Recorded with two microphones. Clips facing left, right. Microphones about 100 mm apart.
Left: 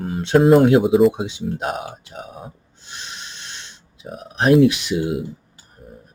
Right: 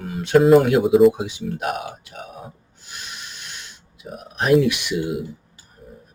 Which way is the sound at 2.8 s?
25° left (ahead or behind).